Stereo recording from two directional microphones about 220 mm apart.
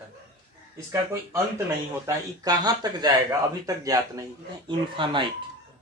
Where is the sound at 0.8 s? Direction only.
10° right (ahead or behind).